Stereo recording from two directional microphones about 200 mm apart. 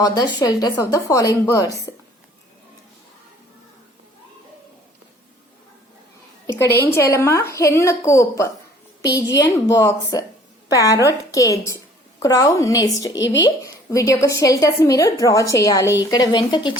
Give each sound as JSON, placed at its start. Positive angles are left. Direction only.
{"t": 0.0, "sound": "a woman's voice", "side_deg": 20}
{"t": 6.5, "sound": "a woman's voice", "side_deg": 15}